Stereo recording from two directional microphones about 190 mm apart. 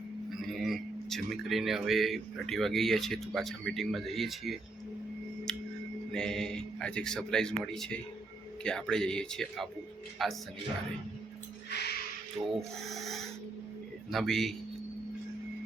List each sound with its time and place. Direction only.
0.4 s speech: centre (ahead or behind)
6.1 s speech: 5° left (ahead or behind)
11.7 s music: 60° left (ahead or behind)
12.5 s speech: centre (ahead or behind)